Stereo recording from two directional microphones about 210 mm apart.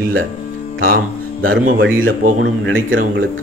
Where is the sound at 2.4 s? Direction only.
70° right (ahead or behind).